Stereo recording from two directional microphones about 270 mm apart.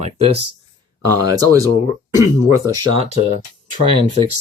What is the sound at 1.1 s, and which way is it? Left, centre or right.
Speech, centre.